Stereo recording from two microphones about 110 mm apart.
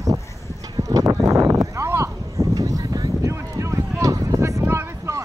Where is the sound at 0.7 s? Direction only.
30° right (ahead or behind).